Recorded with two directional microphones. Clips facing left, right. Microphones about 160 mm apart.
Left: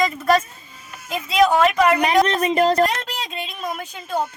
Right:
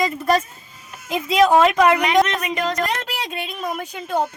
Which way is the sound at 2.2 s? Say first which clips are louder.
Left 6 dB; 35° left (ahead or behind).